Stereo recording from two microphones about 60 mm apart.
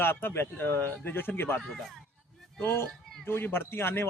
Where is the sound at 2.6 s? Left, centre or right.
Left.